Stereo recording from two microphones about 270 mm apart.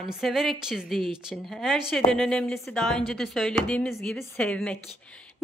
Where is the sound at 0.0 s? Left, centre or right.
Centre.